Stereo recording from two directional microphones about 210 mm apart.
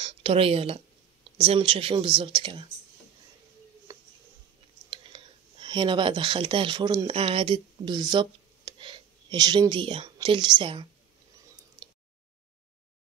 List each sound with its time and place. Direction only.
0.0 s speech: 25° right (ahead or behind)
4.8 s speech: 25° right (ahead or behind)